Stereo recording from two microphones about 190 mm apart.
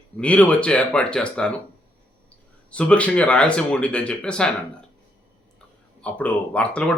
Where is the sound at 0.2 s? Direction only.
5° left (ahead or behind).